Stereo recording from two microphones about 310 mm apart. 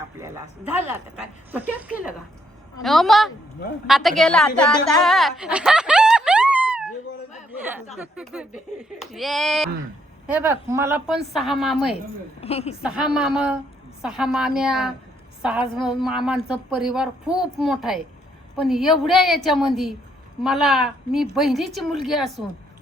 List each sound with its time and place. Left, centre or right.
0.2 s a woman's voice: centre
12.4 s speech: centre
12.8 s a woman's voice: centre